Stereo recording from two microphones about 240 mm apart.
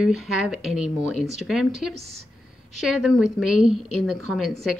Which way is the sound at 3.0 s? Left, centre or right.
Centre.